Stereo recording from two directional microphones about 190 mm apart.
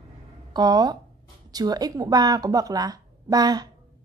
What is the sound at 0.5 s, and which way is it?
A woman's voice, 20° right (ahead or behind).